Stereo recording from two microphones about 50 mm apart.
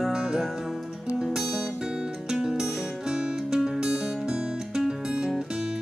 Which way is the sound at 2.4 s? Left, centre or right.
Centre.